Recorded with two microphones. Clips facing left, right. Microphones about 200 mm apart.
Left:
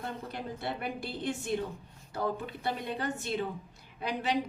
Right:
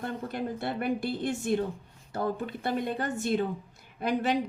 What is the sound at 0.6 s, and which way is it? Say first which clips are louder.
Speech: right 6 dB; 50° right (ahead or behind).